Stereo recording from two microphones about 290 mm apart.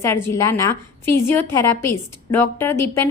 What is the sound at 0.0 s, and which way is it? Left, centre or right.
A woman's voice, centre.